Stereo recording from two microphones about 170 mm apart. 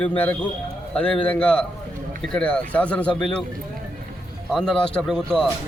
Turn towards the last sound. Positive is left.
turn(degrees=5)  # may be behind; listen again after turning